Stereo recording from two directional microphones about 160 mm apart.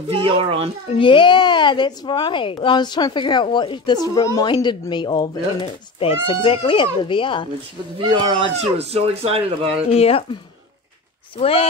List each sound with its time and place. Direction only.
0.1 s speech: 35° right (ahead or behind)
0.9 s a woman's voice: 30° left (ahead or behind)
8.0 s speech: 30° right (ahead or behind)
9.8 s speech: 40° left (ahead or behind)
11.3 s speech: 35° left (ahead or behind)